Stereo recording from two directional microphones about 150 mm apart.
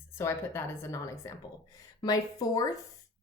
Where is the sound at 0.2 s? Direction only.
20° left (ahead or behind).